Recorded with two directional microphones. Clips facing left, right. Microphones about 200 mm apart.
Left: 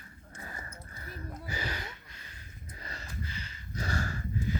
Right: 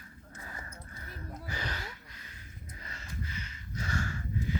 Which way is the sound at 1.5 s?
10° left (ahead or behind).